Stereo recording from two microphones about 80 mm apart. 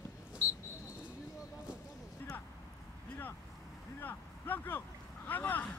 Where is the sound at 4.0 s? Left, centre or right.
Left.